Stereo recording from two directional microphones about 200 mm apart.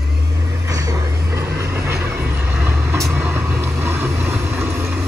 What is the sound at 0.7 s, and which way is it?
Vehicle, 15° right (ahead or behind).